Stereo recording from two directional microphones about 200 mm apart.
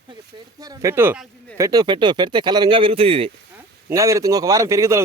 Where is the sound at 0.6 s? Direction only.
15° right (ahead or behind).